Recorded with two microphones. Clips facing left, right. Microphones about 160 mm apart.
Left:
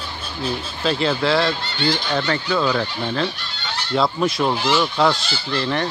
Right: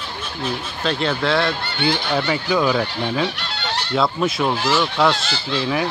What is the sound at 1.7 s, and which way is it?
Speech, 60° right (ahead or behind).